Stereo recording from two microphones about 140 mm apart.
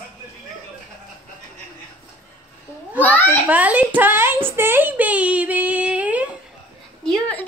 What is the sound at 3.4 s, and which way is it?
Speech, 10° right (ahead or behind).